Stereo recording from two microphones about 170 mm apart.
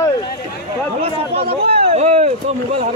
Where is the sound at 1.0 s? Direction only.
35° right (ahead or behind).